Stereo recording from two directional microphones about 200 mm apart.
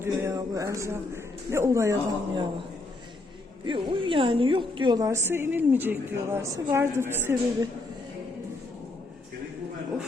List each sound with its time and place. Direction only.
0.0 s a woman's voice: 15° right (ahead or behind)
3.7 s a woman's voice: 25° right (ahead or behind)